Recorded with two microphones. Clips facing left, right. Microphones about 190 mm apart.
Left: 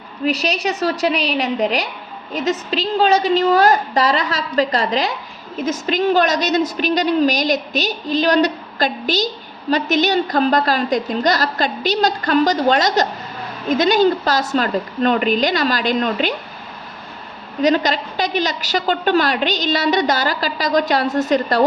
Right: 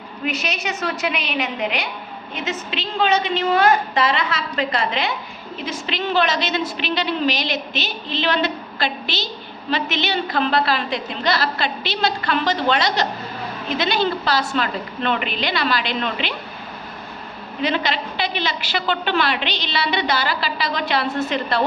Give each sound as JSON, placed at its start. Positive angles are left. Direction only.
{"t": 0.3, "sound": "a woman's voice", "side_deg": 35}
{"t": 17.6, "sound": "a woman's voice", "side_deg": 40}